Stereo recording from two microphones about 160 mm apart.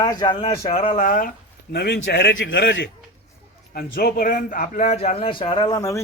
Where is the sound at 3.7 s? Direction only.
70° left (ahead or behind).